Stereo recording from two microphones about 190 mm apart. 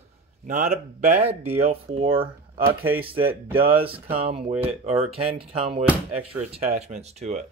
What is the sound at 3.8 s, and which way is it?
Speech, 30° right (ahead or behind).